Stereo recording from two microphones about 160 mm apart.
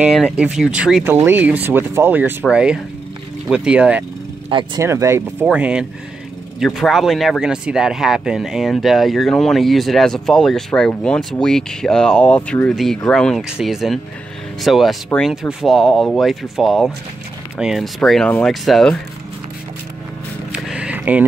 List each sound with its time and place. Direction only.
0.0 s speech: 5° right (ahead or behind)
4.5 s speech: 30° right (ahead or behind)
4.8 s speech: 15° right (ahead or behind); by 18.9 s centre (ahead or behind)
20.5 s a sound: 5° right (ahead or behind)